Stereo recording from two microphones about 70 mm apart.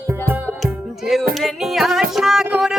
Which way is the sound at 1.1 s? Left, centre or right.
Centre.